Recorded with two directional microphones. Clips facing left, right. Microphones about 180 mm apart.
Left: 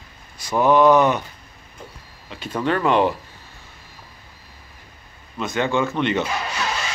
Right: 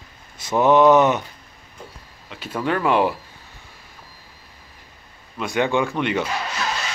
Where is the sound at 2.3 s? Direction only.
5° right (ahead or behind).